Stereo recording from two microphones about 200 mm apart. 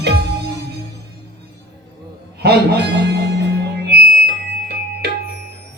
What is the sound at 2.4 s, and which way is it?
Speech, 55° right (ahead or behind).